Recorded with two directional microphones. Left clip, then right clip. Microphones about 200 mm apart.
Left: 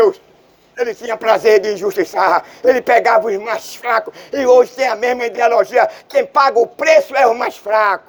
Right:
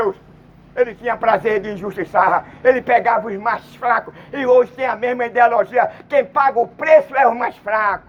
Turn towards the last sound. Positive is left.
turn(degrees=70)  # may be behind; listen again after turning